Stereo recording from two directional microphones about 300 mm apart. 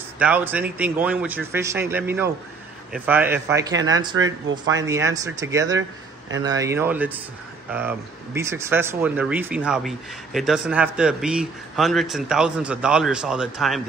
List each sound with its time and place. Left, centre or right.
0.2 s speech: centre
3.7 s speech: right
4.7 s speech: centre